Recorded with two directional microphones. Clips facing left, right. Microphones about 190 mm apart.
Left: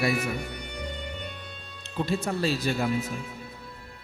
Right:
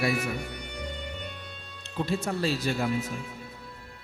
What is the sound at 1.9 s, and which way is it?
A man's voice, 10° left (ahead or behind).